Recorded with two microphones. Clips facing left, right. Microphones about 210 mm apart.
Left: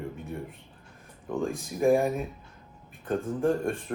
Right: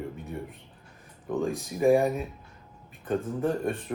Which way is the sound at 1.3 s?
Centre (ahead or behind).